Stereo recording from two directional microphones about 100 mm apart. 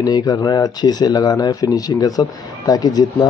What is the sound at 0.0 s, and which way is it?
Speech, 40° left (ahead or behind).